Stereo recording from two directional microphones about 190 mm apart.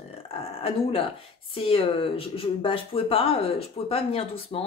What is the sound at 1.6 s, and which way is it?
Speech, 30° left (ahead or behind).